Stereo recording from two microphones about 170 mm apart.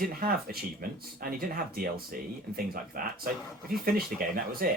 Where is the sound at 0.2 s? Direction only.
60° right (ahead or behind).